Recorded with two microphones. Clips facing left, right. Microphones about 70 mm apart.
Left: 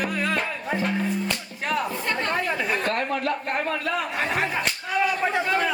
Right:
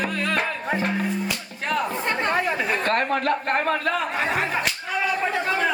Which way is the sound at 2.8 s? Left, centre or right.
Right.